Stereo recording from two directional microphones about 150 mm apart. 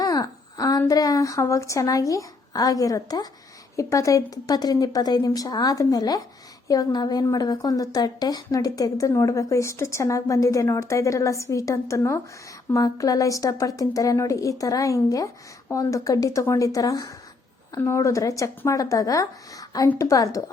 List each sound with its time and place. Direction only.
0.0 s a woman's voice: 25° left (ahead or behind)